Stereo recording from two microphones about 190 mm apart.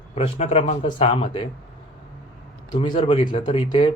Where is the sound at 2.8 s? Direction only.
25° left (ahead or behind).